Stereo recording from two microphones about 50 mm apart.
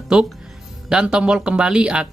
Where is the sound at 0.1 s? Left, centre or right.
Centre.